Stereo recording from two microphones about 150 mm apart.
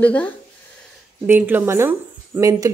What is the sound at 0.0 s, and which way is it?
Speech, 10° left (ahead or behind).